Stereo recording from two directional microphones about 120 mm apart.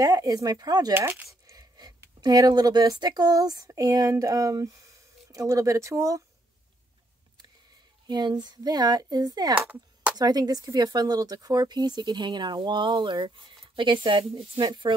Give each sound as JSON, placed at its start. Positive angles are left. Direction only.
{"t": 0.0, "sound": "speech", "side_deg": -30}
{"t": 0.9, "sound": "dog", "side_deg": -20}
{"t": 1.6, "sound": "a sound", "side_deg": -35}
{"t": 2.2, "sound": "speech", "side_deg": -35}
{"t": 8.1, "sound": "speech", "side_deg": -35}
{"t": 9.6, "sound": "a sound", "side_deg": -10}
{"t": 10.1, "sound": "speech", "side_deg": -35}